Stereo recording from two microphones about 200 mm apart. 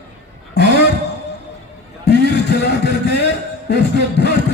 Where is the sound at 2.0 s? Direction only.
60° left (ahead or behind).